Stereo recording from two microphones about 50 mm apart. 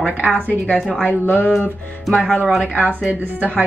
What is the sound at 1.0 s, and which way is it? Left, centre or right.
Speech, left.